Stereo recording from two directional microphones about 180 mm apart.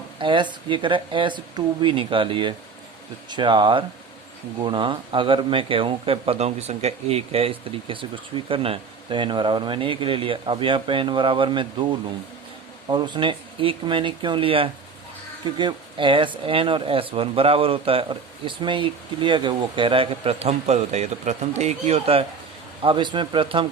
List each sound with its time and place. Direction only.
0.2 s speech: 25° right (ahead or behind)